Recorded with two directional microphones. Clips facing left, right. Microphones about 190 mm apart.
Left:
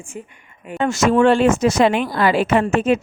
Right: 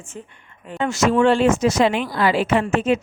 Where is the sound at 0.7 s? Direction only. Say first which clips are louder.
Left 2 dB; 50° left (ahead or behind).